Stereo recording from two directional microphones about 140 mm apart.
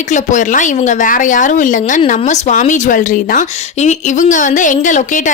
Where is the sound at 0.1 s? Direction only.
60° left (ahead or behind).